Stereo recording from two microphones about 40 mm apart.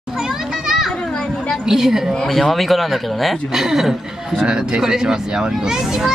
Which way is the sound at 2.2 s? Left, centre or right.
Centre.